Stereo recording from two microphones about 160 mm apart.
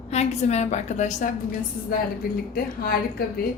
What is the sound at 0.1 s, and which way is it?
A woman's voice, 45° left (ahead or behind).